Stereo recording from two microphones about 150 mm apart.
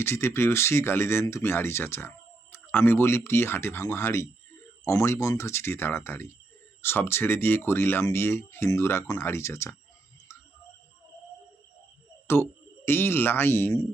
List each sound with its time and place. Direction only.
0.0 s speech: 15° left (ahead or behind)
12.3 s speech: 15° left (ahead or behind)